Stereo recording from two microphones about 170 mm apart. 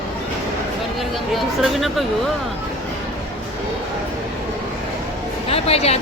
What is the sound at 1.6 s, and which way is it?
Speech, centre (ahead or behind).